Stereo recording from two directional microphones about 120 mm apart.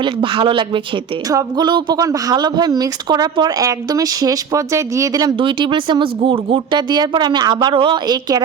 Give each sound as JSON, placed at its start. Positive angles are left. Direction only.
{"t": 0.0, "sound": "speech", "side_deg": -45}
{"t": 1.3, "sound": "speech", "side_deg": -30}
{"t": 5.4, "sound": "speech", "side_deg": -45}